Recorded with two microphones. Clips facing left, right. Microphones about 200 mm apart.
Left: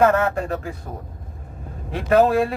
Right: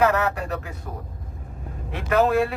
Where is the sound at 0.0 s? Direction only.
50° left (ahead or behind).